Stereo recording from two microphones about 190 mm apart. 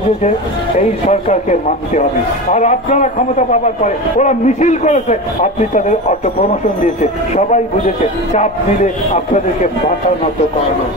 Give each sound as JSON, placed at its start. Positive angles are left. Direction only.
{"t": 0.7, "sound": "a man's voice", "side_deg": 35}